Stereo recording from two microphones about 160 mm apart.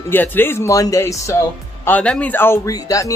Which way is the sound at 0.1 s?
10° left (ahead or behind).